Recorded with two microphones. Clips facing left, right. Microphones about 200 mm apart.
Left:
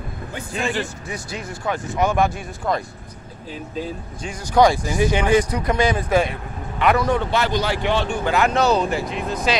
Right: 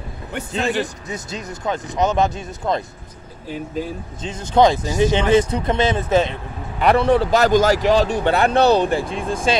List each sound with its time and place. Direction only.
0.5 s speech: 20° right (ahead or behind)
4.2 s speech: 25° right (ahead or behind)